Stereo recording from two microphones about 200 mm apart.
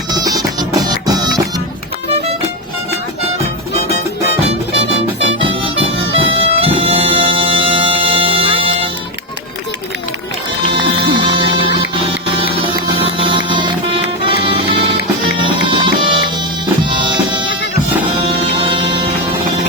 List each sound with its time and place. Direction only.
0.1 s music: 20° right (ahead or behind)
4.7 s music: 30° right (ahead or behind)
10.7 s music: 25° right (ahead or behind)